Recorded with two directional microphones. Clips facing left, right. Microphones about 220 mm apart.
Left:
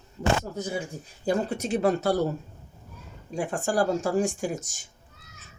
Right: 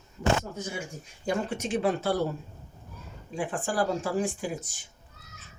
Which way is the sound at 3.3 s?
40° left (ahead or behind).